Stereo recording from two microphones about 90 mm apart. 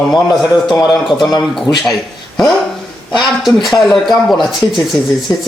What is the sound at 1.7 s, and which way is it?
Speech, 35° left (ahead or behind).